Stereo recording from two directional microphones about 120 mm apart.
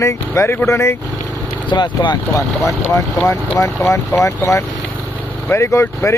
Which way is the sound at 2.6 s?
25° left (ahead or behind).